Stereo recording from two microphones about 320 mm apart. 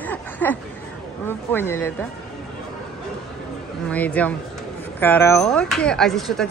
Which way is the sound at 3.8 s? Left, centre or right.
Centre.